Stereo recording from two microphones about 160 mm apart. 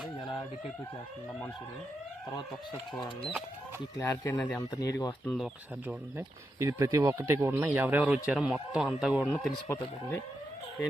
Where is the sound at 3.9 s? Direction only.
20° left (ahead or behind).